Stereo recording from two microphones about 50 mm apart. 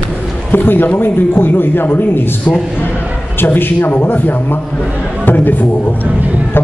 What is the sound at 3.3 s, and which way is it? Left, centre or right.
A man's voice, left.